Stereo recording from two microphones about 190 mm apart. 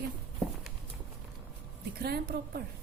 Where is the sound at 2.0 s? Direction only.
55° right (ahead or behind).